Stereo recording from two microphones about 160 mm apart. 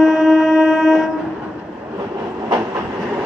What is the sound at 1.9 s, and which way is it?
Train, 25° right (ahead or behind).